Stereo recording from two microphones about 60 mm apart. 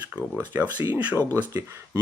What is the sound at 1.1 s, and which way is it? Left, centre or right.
Speech, right.